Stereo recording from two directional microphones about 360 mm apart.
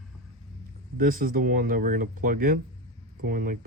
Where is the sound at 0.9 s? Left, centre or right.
Right.